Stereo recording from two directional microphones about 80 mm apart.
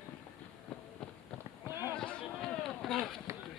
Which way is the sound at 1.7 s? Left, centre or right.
Right.